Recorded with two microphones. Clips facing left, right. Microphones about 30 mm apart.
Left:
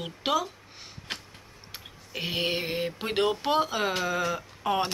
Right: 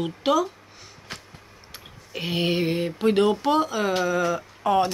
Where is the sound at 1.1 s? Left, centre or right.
Left.